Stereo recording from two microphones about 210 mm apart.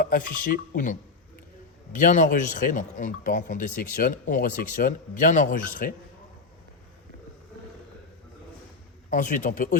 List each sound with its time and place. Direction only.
0.0 s a man's voice: 40° left (ahead or behind)
9.0 s a man's voice: 40° left (ahead or behind)